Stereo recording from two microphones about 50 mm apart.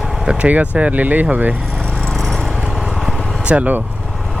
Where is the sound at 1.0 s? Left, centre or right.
Right.